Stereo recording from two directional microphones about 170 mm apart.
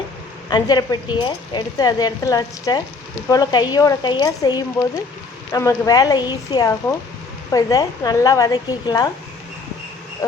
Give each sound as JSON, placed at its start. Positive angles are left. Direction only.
{"t": 0.5, "sound": "a woman's voice", "side_deg": 25}